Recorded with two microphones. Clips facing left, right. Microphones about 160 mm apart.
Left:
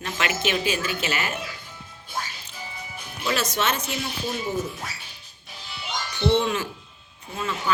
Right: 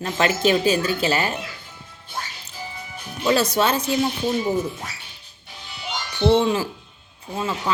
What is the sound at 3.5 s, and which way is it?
Speech, 30° right (ahead or behind).